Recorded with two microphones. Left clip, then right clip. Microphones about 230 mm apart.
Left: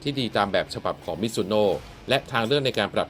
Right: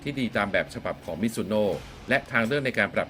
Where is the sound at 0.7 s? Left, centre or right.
Centre.